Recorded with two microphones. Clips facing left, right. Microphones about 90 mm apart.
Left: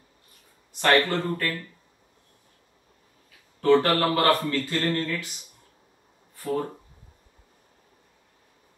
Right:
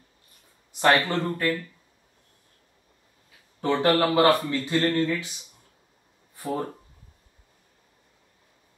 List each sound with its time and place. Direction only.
0.7 s speech: 20° right (ahead or behind)
3.6 s speech: 20° right (ahead or behind)
6.3 s a sound: 20° right (ahead or behind)